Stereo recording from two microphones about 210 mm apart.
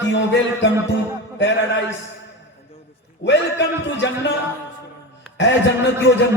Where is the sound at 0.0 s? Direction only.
60° left (ahead or behind).